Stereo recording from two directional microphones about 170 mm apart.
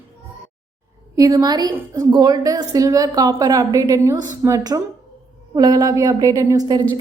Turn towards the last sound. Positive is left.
turn(degrees=-20)  # may be behind; listen again after turning